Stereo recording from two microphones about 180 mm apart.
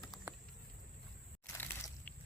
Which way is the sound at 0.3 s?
10° right (ahead or behind).